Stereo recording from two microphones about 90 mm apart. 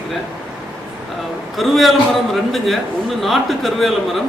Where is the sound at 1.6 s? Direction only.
Centre (ahead or behind).